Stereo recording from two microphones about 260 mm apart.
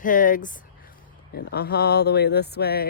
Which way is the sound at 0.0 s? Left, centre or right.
Left.